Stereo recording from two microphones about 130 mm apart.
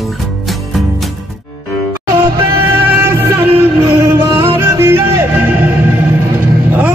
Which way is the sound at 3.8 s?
25° right (ahead or behind).